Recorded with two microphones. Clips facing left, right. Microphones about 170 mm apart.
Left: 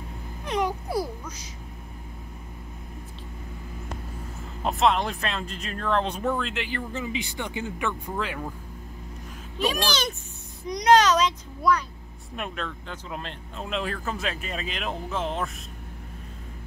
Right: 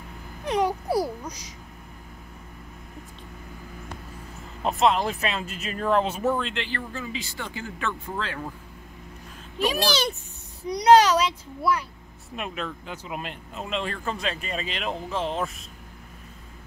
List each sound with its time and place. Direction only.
0.5 s speech: 10° right (ahead or behind)
4.6 s speech: centre (ahead or behind)
6.5 s speech: 10° left (ahead or behind)
6.9 s speech: 20° left (ahead or behind)
9.6 s speech: 10° right (ahead or behind)
13.7 s speech: centre (ahead or behind)